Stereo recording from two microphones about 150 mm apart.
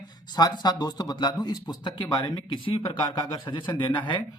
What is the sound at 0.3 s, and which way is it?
Speech, 25° left (ahead or behind).